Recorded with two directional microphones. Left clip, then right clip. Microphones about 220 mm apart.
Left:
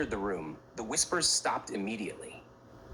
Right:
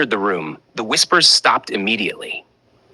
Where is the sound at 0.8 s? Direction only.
35° right (ahead or behind).